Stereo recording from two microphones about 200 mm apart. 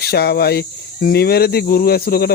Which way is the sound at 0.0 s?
50° left (ahead or behind).